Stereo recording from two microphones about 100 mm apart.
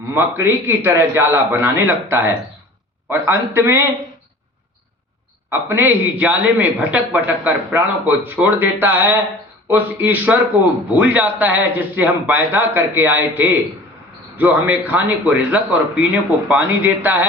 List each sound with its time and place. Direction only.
0.1 s a man's voice: 20° right (ahead or behind)
5.5 s a man's voice: 20° right (ahead or behind)